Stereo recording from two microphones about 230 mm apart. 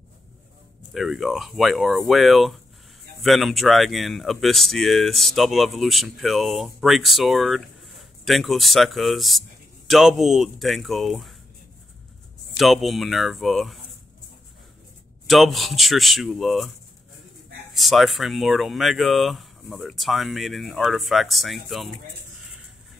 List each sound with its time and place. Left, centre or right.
0.9 s speech: centre
12.5 s speech: centre
15.2 s speech: centre
17.7 s speech: centre